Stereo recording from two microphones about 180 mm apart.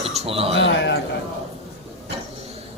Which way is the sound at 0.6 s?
80° left.